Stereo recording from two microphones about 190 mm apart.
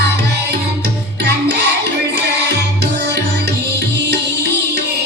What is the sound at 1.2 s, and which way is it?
Music, 65° right (ahead or behind).